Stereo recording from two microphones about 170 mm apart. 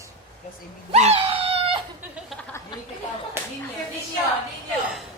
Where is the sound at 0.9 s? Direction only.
40° right (ahead or behind).